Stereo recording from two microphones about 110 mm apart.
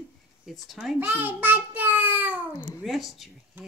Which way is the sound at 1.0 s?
15° right (ahead or behind).